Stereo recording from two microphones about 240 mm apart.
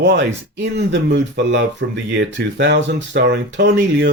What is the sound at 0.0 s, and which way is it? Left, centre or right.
Speech, right.